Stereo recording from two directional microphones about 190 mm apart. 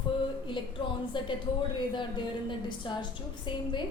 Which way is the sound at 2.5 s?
25° left (ahead or behind).